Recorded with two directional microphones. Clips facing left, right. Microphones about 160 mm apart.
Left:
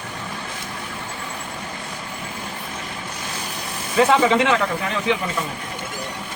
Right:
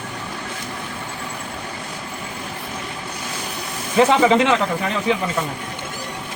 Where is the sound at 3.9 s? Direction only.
30° right (ahead or behind).